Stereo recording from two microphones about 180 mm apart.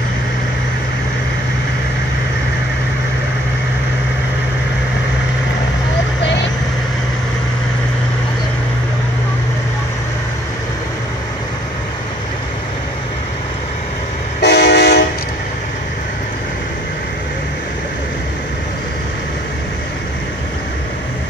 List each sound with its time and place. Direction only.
14.4 s train: 65° left (ahead or behind)